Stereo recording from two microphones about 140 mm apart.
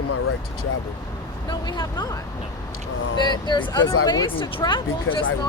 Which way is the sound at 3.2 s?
30° left (ahead or behind).